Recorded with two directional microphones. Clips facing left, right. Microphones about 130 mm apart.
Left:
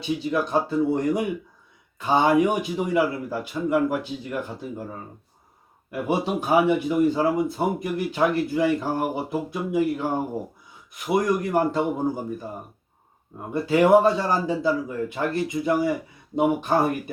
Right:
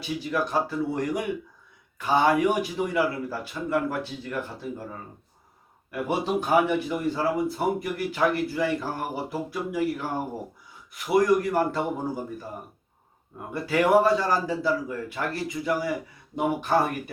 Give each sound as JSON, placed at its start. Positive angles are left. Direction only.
{"t": 0.2, "sound": "speech", "side_deg": 20}
{"t": 13.5, "sound": "speech", "side_deg": 25}